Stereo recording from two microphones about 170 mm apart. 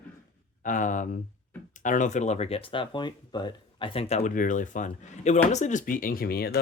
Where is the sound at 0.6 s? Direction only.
50° left (ahead or behind).